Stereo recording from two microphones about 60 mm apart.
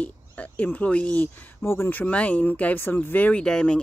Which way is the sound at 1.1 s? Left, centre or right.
Left.